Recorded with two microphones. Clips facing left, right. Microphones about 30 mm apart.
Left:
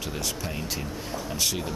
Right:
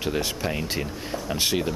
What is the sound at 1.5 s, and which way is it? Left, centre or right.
Speech, right.